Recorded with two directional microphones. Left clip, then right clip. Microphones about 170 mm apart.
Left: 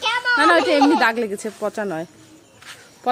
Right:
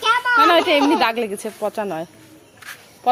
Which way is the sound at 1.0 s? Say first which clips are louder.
Even; 30° left (ahead or behind).